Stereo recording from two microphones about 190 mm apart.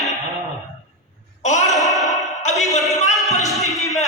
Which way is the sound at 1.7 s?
Centre (ahead or behind).